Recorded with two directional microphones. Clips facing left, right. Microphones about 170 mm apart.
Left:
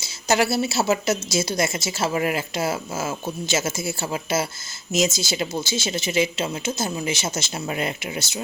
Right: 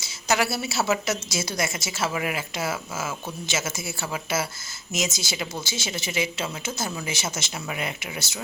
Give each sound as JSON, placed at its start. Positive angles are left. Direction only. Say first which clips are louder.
{"t": 0.3, "sound": "a woman's voice", "louder": "left 4 dB", "side_deg": 25}